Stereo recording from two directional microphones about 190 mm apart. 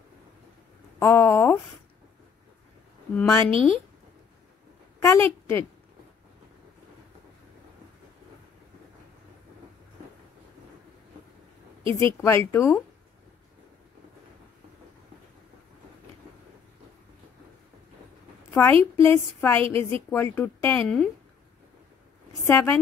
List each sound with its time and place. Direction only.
0.9 s a woman's voice: 15° left (ahead or behind)
3.2 s a woman's voice: 10° left (ahead or behind)
3.5 s speech: 30° right (ahead or behind)
5.0 s a woman's voice: 15° left (ahead or behind)
11.8 s a woman's voice: 25° right (ahead or behind)
12.2 s a woman's voice: 10° left (ahead or behind)
18.5 s a woman's voice: 10° left (ahead or behind)
22.5 s a woman's voice: 15° left (ahead or behind)